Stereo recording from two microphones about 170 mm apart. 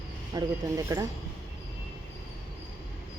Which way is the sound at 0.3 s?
20° right (ahead or behind).